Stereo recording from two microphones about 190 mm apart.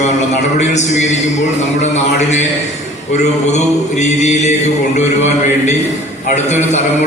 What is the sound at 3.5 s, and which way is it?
A man's voice, 40° left (ahead or behind).